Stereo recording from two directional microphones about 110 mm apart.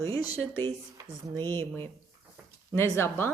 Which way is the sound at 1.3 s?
20° left (ahead or behind).